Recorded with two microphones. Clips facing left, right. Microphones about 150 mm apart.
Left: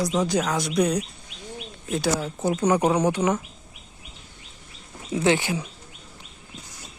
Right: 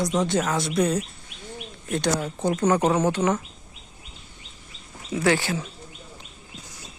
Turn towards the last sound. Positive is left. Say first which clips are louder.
# left 1 dB
turn(degrees=15)  # may be behind; listen again after turning